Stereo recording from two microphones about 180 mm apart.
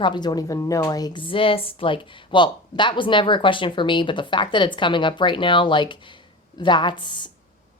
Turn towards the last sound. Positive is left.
turn(degrees=25)  # may be behind; listen again after turning